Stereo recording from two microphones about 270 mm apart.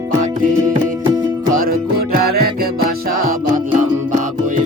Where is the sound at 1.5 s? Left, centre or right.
Right.